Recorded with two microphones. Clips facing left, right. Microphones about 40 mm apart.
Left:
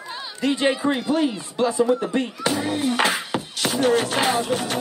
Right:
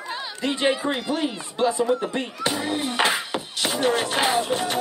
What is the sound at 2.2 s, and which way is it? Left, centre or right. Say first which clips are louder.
Speech: left 3 dB; right.